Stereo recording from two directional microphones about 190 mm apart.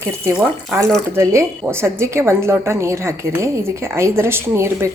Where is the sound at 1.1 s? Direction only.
15° right (ahead or behind).